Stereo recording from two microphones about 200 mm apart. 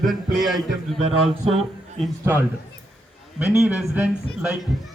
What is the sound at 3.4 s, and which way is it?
Speech, 5° right (ahead or behind).